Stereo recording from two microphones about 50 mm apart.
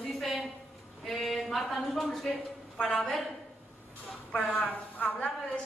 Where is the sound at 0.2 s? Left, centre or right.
Centre.